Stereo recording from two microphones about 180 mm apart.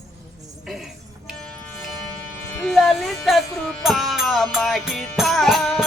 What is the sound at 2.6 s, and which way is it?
Speech, centre (ahead or behind).